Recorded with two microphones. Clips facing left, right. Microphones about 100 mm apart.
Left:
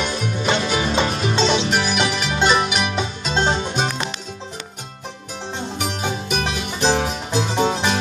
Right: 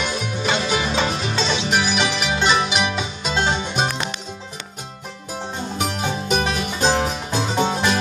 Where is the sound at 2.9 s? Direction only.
30° left (ahead or behind).